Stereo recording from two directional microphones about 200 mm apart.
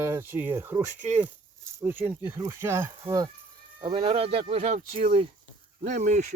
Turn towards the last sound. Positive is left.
turn(degrees=-40)  # may be behind; listen again after turning